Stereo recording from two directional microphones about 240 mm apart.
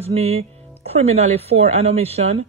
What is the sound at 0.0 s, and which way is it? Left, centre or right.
Speech, right.